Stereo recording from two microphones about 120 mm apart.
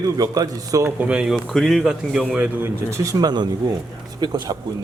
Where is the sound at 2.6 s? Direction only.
25° right (ahead or behind).